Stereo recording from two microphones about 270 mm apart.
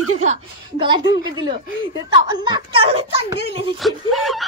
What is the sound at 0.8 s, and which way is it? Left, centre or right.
A child's voice, centre.